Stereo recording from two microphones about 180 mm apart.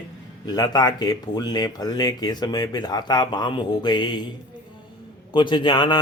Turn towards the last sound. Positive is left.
turn(degrees=25)  # may be behind; listen again after turning